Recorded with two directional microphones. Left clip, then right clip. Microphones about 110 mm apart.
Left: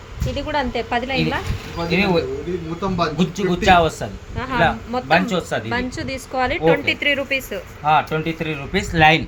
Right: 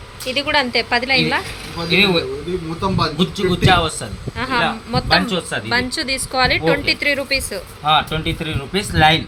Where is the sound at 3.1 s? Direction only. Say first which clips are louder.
Right 2 dB; 35° left (ahead or behind).